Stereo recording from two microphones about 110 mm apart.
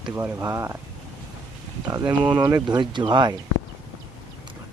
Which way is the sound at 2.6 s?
45° right (ahead or behind).